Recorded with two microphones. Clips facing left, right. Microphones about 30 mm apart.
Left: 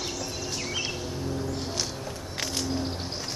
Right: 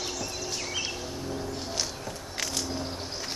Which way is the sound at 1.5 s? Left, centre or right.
Centre.